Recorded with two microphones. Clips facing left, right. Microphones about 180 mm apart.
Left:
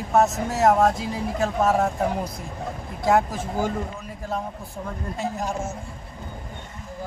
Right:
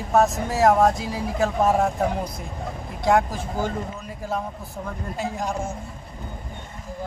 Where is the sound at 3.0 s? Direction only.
5° left (ahead or behind).